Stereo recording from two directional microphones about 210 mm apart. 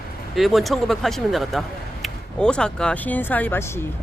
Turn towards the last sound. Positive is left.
turn(degrees=10)  # may be behind; listen again after turning